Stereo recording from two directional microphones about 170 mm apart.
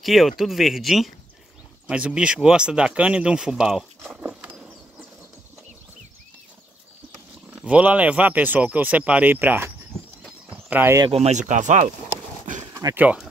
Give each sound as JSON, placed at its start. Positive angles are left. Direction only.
{"t": 0.0, "sound": "speech", "side_deg": 0}
{"t": 7.5, "sound": "speech", "side_deg": -5}
{"t": 10.5, "sound": "a sound", "side_deg": -10}
{"t": 11.1, "sound": "speech", "side_deg": -40}
{"t": 12.7, "sound": "speech", "side_deg": -15}